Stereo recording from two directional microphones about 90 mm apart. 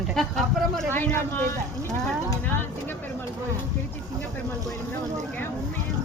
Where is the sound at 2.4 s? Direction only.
25° left (ahead or behind).